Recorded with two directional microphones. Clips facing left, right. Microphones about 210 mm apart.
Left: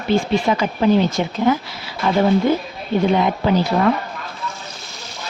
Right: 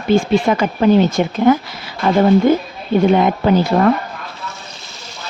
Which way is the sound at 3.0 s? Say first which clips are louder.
Right 4 dB; 50° right (ahead or behind).